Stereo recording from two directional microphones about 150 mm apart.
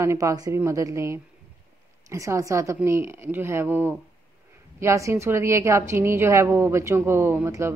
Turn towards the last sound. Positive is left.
turn(degrees=-15)  # may be behind; listen again after turning